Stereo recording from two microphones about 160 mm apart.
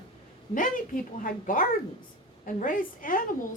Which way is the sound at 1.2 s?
60° left (ahead or behind).